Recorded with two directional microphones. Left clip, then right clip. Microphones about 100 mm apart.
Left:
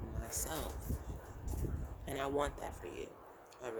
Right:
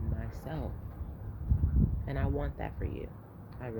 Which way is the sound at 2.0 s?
45° left (ahead or behind).